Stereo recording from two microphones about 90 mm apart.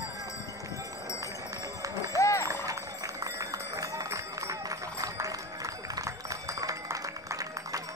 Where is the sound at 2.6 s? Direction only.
40° right (ahead or behind).